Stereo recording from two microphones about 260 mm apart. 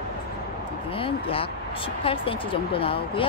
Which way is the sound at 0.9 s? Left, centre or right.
Left.